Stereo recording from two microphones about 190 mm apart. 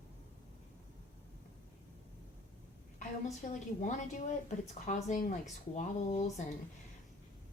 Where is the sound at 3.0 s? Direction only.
40° left (ahead or behind).